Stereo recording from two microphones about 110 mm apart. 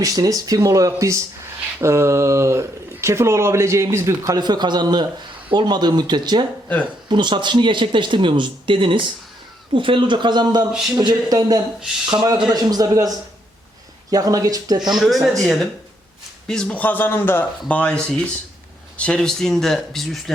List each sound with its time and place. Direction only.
0.0 s speech: 35° right (ahead or behind)
10.7 s speech: 5° right (ahead or behind)
11.0 s speech: 35° right (ahead or behind)
14.8 s speech: centre (ahead or behind)